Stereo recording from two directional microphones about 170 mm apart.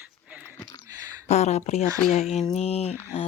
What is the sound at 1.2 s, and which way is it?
Speech, 40° left (ahead or behind).